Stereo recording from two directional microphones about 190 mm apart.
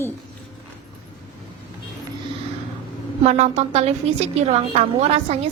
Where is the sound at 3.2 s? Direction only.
35° right (ahead or behind).